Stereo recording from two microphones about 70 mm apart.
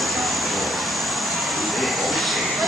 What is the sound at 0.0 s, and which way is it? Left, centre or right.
Vehicle, centre.